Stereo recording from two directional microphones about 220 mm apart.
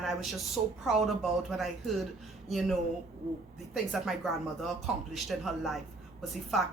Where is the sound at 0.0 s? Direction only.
Centre (ahead or behind).